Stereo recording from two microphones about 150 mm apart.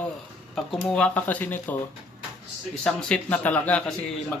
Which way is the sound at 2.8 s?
10° left (ahead or behind).